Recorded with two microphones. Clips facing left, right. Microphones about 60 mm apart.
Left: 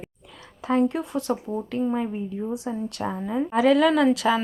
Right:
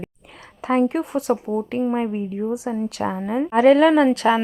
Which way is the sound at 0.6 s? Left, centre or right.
Right.